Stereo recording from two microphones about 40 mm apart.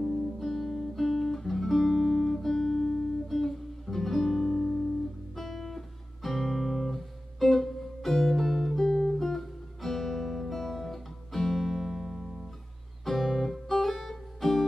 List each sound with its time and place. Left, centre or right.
0.0 s music: left
0.4 s guitar: centre
5.3 s music: centre